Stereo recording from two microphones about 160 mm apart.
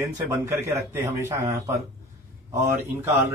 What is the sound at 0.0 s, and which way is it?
A man's voice, 15° right (ahead or behind).